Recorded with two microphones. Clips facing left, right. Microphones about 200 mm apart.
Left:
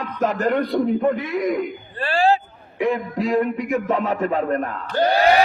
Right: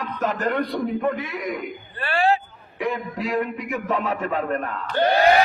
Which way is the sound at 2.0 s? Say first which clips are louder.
Left 3 dB; 30° left (ahead or behind).